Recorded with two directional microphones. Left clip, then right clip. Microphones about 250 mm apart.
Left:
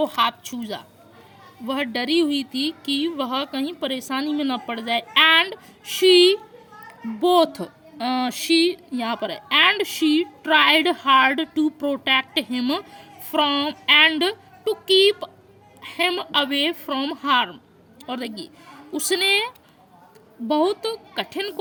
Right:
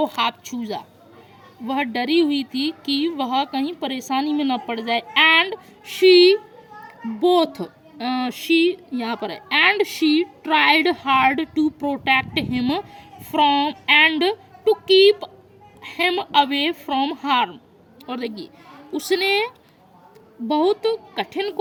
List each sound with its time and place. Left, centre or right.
0.0 s a woman's voice: centre
18.3 s a sound: left
18.9 s speech: centre
21.3 s speech: centre